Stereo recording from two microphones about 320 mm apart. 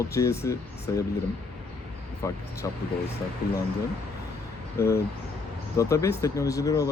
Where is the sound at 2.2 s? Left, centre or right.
Centre.